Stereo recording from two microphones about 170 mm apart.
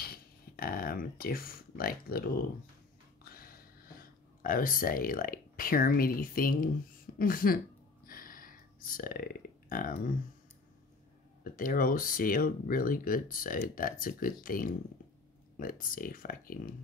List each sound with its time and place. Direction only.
0.0 s a sound: 60° left (ahead or behind)
7.2 s speech: 55° left (ahead or behind)
8.1 s burping: 55° left (ahead or behind)
11.4 s speech: 55° left (ahead or behind)